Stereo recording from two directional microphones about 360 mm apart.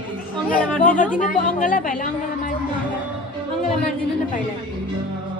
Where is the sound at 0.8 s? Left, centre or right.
Left.